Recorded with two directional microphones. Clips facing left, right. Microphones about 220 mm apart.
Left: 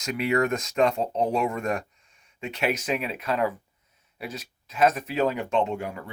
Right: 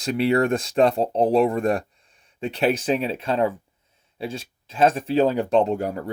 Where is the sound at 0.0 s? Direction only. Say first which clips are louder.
Right 4 dB; 30° right (ahead or behind).